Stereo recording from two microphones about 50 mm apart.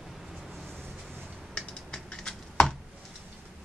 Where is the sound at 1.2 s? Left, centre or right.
Centre.